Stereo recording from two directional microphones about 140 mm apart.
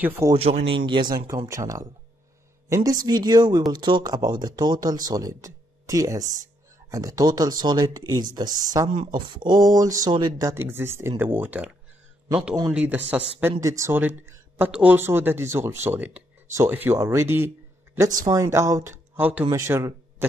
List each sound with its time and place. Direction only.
0.0 s speech: 15° right (ahead or behind)
0.3 s speech: 45° right (ahead or behind); by 11.7 s 15° right (ahead or behind)
12.7 s speech: 15° right (ahead or behind)